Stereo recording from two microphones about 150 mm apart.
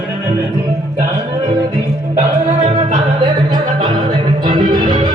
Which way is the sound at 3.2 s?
30° right (ahead or behind).